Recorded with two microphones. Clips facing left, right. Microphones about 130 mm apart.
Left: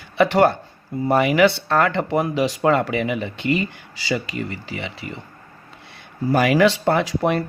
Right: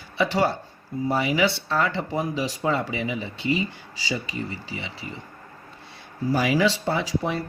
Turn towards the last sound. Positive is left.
turn(degrees=65)  # may be behind; listen again after turning